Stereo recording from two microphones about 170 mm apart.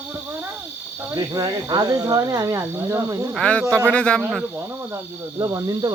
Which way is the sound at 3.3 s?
5° left (ahead or behind).